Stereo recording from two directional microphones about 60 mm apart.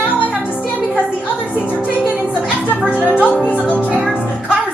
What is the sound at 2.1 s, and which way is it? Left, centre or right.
Music, left.